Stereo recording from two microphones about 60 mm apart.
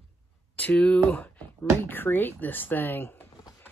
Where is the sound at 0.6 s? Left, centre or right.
Left.